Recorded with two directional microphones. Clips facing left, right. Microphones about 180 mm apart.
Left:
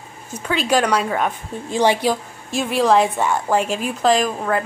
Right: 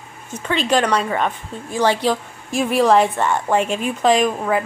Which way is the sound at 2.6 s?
Centre (ahead or behind).